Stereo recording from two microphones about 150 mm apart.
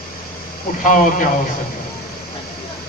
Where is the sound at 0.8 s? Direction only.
60° left (ahead or behind).